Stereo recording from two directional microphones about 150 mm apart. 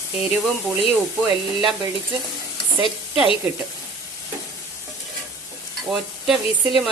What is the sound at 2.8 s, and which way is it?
Speech, 35° left (ahead or behind).